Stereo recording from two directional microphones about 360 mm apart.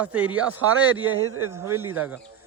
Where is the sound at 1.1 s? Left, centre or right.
Right.